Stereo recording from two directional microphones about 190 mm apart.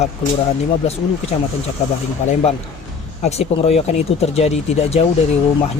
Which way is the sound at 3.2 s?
35° left (ahead or behind).